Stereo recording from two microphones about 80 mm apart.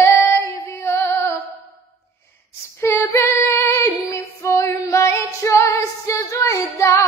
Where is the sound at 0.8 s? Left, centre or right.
Left.